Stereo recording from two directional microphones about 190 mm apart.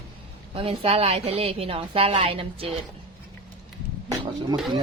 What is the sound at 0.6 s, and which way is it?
A woman's voice, 30° right (ahead or behind).